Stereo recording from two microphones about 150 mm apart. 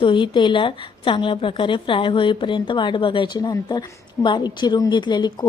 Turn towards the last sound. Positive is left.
turn(degrees=30)  # may be behind; listen again after turning